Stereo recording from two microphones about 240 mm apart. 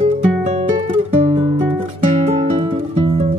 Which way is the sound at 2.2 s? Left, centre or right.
Right.